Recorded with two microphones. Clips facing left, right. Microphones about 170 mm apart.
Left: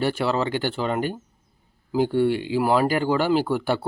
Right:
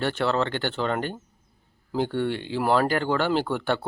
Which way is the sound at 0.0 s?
10° left (ahead or behind).